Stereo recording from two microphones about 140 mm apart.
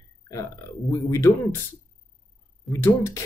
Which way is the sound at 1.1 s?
20° left (ahead or behind).